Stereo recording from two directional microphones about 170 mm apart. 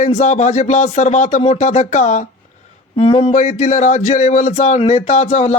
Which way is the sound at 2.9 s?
30° left (ahead or behind).